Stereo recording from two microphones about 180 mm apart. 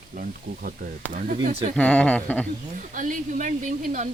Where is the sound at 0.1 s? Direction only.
50° right (ahead or behind).